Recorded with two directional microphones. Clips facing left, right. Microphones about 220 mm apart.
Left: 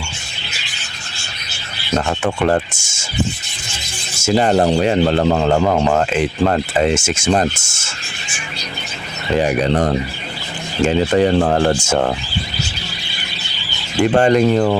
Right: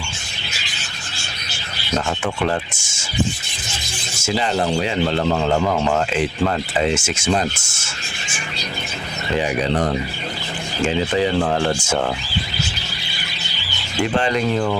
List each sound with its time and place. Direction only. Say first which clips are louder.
2.0 s speech: left 4 dB; 45° left (ahead or behind)
4.2 s speech: left 7 dB; 45° left (ahead or behind)
9.4 s speech: left 4 dB; 45° left (ahead or behind)
14.2 s speech: left 8 dB; 45° left (ahead or behind)